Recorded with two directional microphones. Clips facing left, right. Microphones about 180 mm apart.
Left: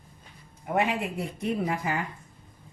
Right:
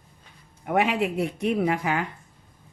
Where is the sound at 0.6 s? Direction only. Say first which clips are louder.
Right 4 dB; 75° right (ahead or behind).